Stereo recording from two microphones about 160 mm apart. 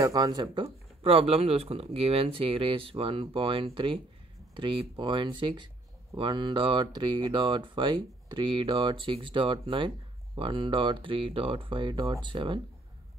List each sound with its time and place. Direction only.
0.0 s speech: 25° right (ahead or behind)